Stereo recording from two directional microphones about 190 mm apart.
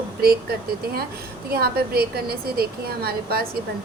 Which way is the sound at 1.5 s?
55° right (ahead or behind).